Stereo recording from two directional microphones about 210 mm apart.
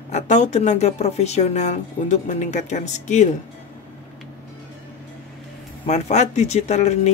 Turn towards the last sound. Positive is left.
turn(degrees=30)  # may be behind; listen again after turning